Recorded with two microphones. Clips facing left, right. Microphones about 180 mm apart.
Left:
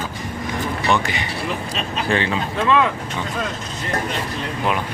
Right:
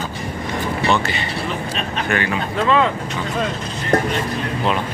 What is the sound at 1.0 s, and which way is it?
Speech, 15° left (ahead or behind).